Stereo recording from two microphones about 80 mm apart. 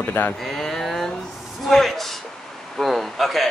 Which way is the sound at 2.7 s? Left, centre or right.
Centre.